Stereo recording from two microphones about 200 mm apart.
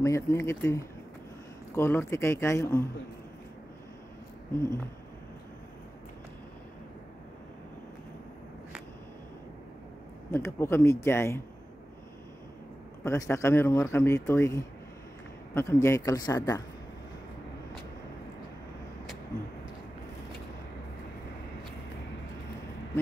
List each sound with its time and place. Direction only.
0.0 s speech: 15° left (ahead or behind)
10.3 s speech: 10° left (ahead or behind)
13.0 s speech: 15° left (ahead or behind)